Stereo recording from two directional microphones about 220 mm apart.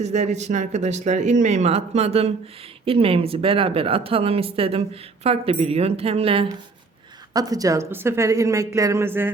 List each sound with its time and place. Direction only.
0.0 s a woman's voice: 30° right (ahead or behind); by 9.3 s 10° right (ahead or behind)